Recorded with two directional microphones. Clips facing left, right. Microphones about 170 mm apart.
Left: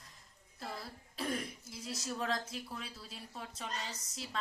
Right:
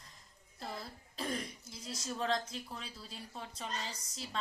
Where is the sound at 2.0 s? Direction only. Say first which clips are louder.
Right 2 dB; 5° left (ahead or behind).